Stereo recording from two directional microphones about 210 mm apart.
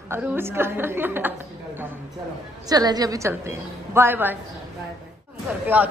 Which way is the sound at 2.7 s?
20° right (ahead or behind).